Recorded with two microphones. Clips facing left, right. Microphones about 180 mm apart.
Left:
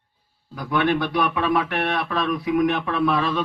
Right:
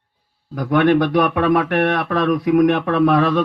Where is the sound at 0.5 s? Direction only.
55° right (ahead or behind).